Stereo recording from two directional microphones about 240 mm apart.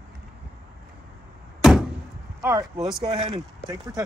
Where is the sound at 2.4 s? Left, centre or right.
Centre.